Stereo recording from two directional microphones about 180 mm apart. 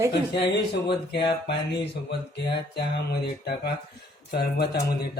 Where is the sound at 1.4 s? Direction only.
70° left (ahead or behind).